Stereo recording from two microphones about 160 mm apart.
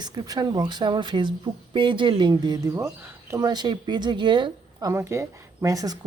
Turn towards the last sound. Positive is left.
turn(degrees=-20)  # may be behind; listen again after turning